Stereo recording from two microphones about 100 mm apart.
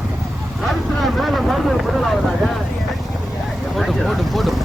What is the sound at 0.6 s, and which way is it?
Speech, centre (ahead or behind).